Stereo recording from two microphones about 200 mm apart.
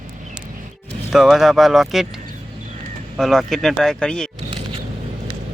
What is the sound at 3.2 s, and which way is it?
Speech, centre (ahead or behind).